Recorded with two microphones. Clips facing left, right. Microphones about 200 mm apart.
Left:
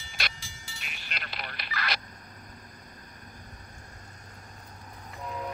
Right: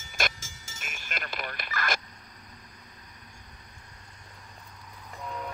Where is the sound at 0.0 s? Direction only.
45° right (ahead or behind).